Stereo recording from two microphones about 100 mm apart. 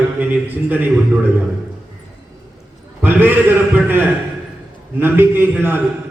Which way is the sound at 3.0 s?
20° right (ahead or behind).